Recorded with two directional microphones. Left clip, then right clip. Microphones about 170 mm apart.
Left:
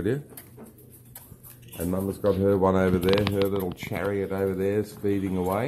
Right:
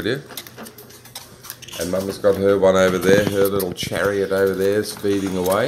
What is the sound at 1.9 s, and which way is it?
Speech, 35° left (ahead or behind).